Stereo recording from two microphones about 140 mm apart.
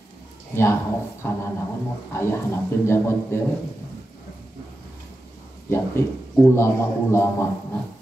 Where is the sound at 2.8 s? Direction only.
20° left (ahead or behind).